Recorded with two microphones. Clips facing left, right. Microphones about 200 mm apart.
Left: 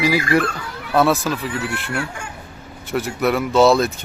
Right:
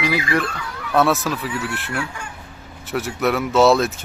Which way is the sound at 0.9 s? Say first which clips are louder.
Left 1 dB; centre (ahead or behind).